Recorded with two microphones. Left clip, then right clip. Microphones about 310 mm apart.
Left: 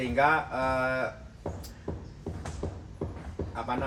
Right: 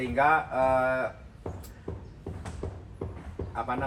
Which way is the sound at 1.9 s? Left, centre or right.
Left.